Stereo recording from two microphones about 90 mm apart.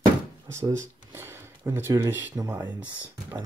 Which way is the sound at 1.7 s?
30° right (ahead or behind).